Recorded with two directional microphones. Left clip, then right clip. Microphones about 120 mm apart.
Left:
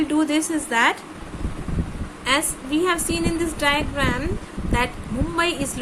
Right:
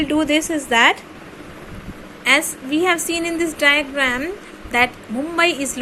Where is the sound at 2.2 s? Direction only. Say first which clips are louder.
Right 5 dB; 30° right (ahead or behind).